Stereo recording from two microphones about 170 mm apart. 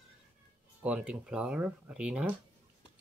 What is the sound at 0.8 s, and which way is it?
Speech, 5° right (ahead or behind).